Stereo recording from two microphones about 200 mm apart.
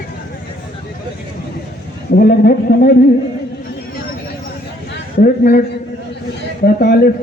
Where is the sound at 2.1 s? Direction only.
50° left (ahead or behind).